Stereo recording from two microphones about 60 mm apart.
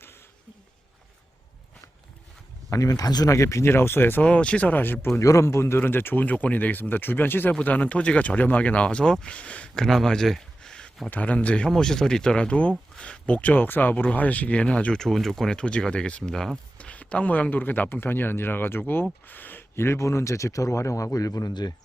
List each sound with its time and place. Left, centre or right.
2.6 s speech: left
3.7 s speech: left
4.2 s speech: left
5.2 s speech: left
6.2 s speech: left
7.6 s speech: left
9.7 s speech: centre
11.1 s speech: left
14.9 s speech: centre
16.7 s speech: left